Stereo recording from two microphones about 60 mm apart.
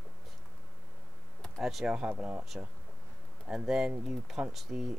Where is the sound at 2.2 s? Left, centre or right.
Right.